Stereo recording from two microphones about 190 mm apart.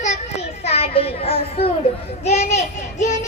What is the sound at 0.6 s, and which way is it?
A child's voice, 30° left (ahead or behind).